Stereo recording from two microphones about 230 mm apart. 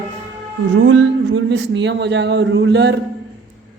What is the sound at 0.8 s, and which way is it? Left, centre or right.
Speech, right.